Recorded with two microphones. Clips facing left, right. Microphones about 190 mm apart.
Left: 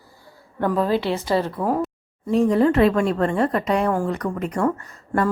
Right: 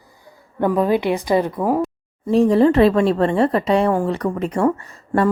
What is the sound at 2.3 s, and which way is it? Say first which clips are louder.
A woman's voice: right 3 dB; 30° right (ahead or behind).